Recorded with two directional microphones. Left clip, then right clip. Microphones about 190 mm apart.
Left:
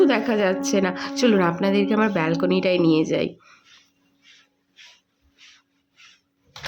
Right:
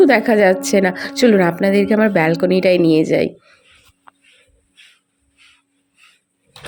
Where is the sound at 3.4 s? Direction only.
10° right (ahead or behind).